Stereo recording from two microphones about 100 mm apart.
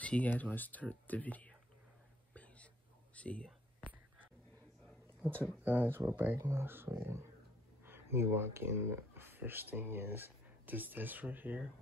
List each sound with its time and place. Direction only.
0.0 s speech: 15° left (ahead or behind)
2.3 s whispering: 15° left (ahead or behind)
5.6 s speech: 20° right (ahead or behind)